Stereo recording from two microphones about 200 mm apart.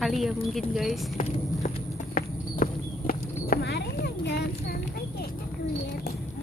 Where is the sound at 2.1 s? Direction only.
45° left (ahead or behind).